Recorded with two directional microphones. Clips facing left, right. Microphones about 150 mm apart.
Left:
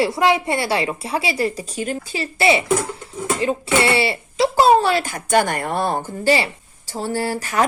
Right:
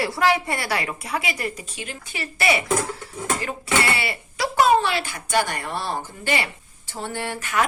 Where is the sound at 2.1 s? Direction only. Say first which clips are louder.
Left 4 dB; 30° left (ahead or behind); by 6.0 s 50° left (ahead or behind).